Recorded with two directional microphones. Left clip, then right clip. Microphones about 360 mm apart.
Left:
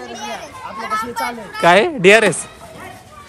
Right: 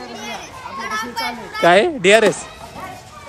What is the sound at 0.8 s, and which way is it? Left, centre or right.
A child's voice, centre.